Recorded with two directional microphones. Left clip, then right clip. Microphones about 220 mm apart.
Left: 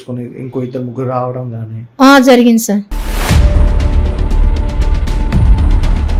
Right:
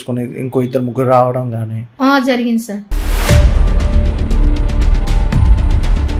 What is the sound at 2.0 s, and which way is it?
Speech, 45° left (ahead or behind).